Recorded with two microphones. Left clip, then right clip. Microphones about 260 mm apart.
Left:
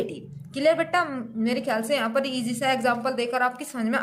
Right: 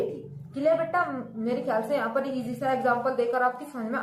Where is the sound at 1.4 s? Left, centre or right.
Left.